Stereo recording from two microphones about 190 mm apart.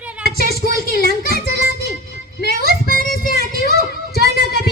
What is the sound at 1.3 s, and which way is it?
Music, 55° left (ahead or behind).